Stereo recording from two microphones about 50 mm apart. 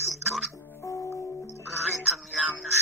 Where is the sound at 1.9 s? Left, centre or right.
Centre.